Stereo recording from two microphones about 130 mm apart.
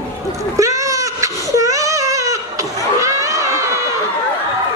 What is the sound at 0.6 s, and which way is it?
Baby cry, 25° right (ahead or behind).